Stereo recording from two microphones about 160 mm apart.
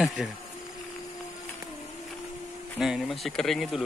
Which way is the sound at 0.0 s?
Centre (ahead or behind).